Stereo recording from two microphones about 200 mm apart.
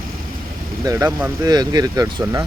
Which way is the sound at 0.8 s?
15° right (ahead or behind).